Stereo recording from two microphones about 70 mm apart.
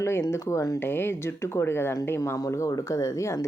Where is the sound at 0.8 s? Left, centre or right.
Left.